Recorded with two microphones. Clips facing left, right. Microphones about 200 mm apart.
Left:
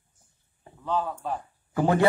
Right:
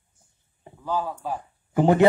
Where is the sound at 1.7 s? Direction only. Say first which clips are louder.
Right 4 dB; 20° right (ahead or behind).